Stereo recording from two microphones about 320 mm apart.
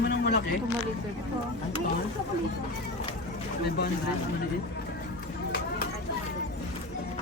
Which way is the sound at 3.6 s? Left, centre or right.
Left.